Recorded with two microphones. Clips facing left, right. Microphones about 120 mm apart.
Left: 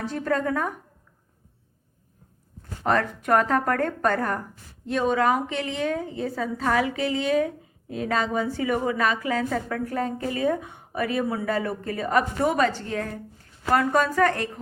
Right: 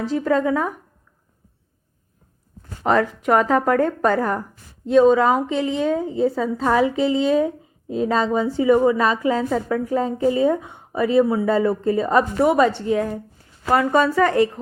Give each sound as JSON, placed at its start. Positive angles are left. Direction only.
{"t": 0.2, "sound": "a woman's voice", "side_deg": -10}
{"t": 2.8, "sound": "a woman's voice", "side_deg": -5}
{"t": 4.9, "sound": "a woman's voice", "side_deg": -20}
{"t": 9.5, "sound": "a woman's voice", "side_deg": -10}
{"t": 13.7, "sound": "speech", "side_deg": -5}